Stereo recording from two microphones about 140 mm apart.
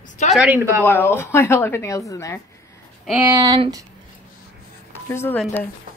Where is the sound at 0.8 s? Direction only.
15° left (ahead or behind).